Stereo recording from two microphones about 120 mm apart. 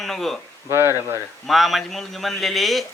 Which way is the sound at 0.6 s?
20° right (ahead or behind).